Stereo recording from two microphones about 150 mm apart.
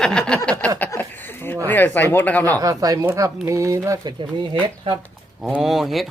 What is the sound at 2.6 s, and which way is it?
Speech, 25° right (ahead or behind).